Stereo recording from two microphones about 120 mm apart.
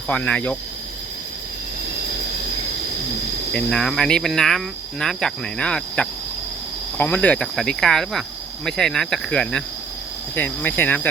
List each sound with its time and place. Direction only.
0.1 s cricket: 10° left (ahead or behind)
3.5 s cricket: 5° left (ahead or behind)